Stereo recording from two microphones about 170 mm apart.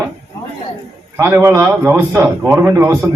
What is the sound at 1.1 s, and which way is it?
A man's voice, 15° right (ahead or behind).